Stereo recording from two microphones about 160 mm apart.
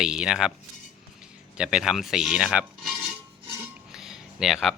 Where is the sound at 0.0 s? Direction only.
5° right (ahead or behind).